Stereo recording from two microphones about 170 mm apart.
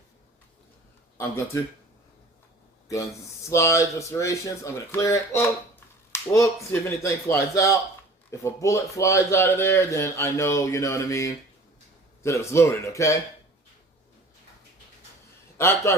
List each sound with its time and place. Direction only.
2.9 s speech: 20° left (ahead or behind)
15.5 s a man's voice: 15° left (ahead or behind)